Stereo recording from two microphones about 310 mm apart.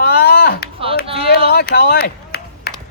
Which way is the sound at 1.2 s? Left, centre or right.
Left.